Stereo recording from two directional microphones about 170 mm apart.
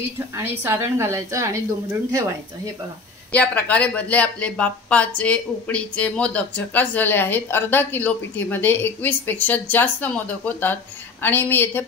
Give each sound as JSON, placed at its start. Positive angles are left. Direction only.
{"t": 0.4, "sound": "a woman's voice", "side_deg": -15}
{"t": 3.3, "sound": "a woman's voice", "side_deg": 10}